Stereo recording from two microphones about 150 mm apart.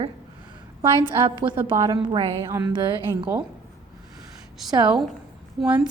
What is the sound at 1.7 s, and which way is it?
Speech, 30° right (ahead or behind).